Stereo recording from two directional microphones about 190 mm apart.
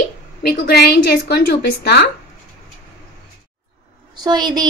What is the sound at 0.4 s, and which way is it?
A woman's voice, 55° left (ahead or behind).